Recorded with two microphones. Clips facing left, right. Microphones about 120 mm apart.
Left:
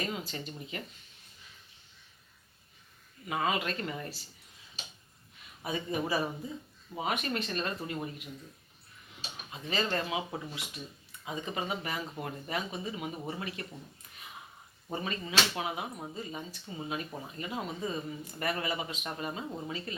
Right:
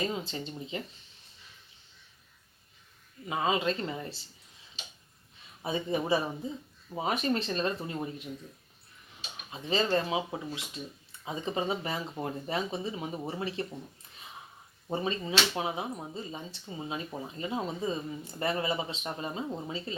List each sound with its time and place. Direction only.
0.0 s speech: 25° right (ahead or behind)
3.2 s speech: 25° right (ahead or behind)
5.6 s speech: 25° right (ahead or behind)
9.5 s speech: 25° right (ahead or behind)
14.8 s speech: 25° right (ahead or behind)